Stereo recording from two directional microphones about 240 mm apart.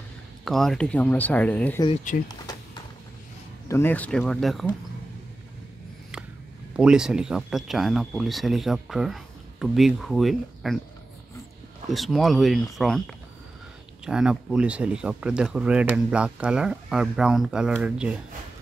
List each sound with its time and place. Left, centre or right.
0.5 s speech: centre
2.1 s speech: left
3.6 s speech: centre
6.8 s speech: centre
11.9 s speech: centre